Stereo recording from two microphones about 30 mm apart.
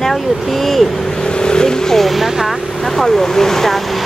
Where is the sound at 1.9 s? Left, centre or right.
Centre.